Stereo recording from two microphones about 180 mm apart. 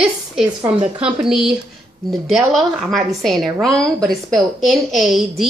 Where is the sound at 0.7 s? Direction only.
30° right (ahead or behind).